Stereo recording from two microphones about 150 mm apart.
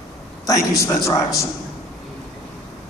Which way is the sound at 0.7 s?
20° left (ahead or behind).